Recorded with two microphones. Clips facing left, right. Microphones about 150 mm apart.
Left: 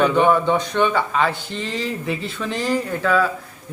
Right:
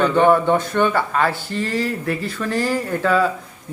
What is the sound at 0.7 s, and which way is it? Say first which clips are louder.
Speech: even; 10° right (ahead or behind).